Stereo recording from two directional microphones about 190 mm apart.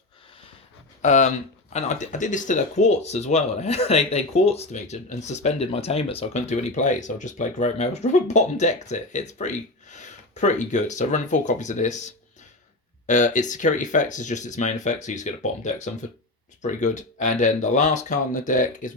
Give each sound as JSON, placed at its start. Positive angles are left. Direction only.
{"t": 1.0, "sound": "speech", "side_deg": 40}